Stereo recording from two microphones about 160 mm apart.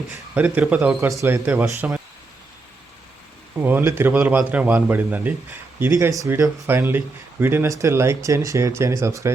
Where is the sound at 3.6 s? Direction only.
15° right (ahead or behind).